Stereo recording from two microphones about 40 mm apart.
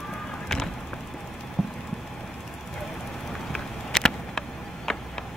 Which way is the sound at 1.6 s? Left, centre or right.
Centre.